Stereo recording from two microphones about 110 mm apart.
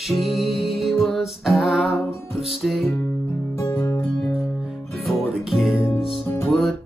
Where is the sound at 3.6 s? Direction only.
25° left (ahead or behind).